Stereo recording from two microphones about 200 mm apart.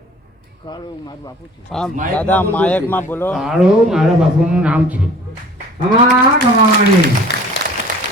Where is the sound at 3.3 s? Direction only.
Centre (ahead or behind).